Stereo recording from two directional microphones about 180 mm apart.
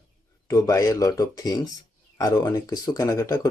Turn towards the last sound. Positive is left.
turn(degrees=20)  # may be behind; listen again after turning